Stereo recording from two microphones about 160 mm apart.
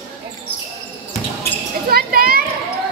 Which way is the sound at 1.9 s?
65° right (ahead or behind).